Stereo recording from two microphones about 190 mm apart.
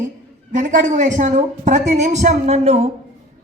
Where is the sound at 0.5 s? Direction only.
45° right (ahead or behind).